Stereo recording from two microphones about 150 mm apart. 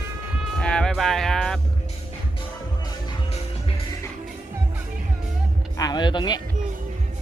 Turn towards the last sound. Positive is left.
turn(degrees=30)  # may be behind; listen again after turning